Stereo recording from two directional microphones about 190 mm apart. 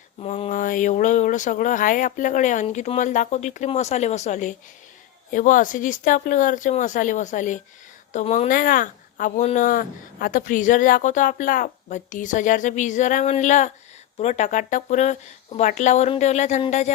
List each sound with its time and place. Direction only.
0.2 s speech: 35° left (ahead or behind)